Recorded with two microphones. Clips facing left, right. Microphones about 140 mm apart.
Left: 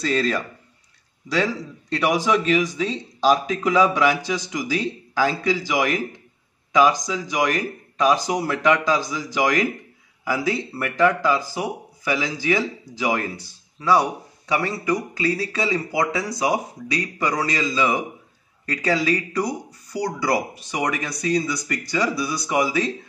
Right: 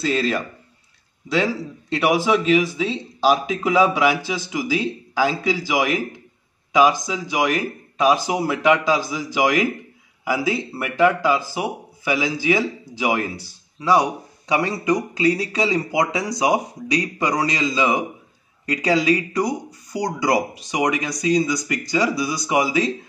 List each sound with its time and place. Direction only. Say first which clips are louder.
0.0 s speech: right 1 dB; 5° right (ahead or behind)